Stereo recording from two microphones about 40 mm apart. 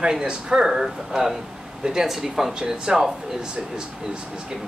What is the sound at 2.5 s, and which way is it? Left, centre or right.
Speech, centre.